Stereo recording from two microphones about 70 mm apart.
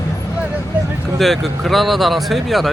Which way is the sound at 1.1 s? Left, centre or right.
Centre.